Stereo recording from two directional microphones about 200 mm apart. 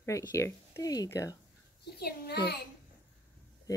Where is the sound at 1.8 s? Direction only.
55° left (ahead or behind).